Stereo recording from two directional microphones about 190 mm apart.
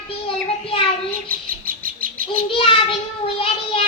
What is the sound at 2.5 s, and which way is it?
Child singing, 30° left (ahead or behind).